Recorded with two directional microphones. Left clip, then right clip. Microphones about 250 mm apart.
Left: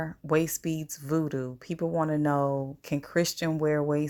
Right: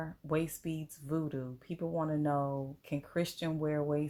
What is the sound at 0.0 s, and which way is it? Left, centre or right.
Speech, left.